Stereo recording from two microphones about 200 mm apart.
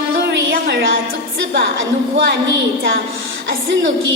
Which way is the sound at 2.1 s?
60° right (ahead or behind).